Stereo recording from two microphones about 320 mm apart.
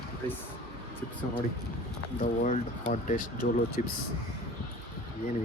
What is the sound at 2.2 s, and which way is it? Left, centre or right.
Speech, left.